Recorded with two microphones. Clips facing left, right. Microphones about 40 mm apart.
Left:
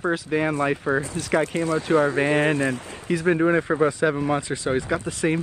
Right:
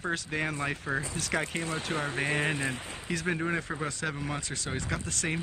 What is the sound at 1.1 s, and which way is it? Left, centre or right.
Speech, centre.